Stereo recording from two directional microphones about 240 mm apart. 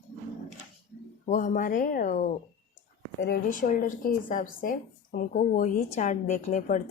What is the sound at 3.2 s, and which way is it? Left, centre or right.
Speech, left.